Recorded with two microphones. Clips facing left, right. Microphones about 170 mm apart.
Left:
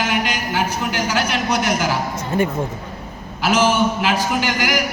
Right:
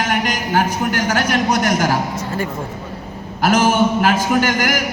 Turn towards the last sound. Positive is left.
turn(degrees=-50)  # may be behind; listen again after turning